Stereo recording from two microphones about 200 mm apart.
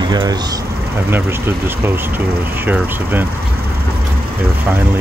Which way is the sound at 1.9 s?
10° right (ahead or behind).